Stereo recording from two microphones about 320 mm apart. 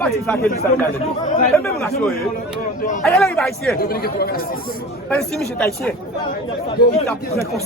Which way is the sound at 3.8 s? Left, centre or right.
Left.